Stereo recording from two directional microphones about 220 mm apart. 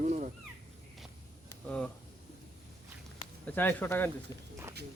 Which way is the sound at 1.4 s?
5° left (ahead or behind).